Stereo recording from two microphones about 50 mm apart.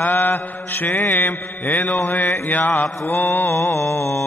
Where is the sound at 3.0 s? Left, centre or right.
Left.